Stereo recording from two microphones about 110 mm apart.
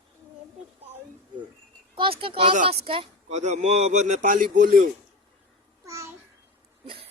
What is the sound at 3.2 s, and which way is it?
Speech, 90° right.